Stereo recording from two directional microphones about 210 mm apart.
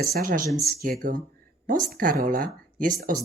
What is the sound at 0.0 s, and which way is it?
Speech, 45° right (ahead or behind).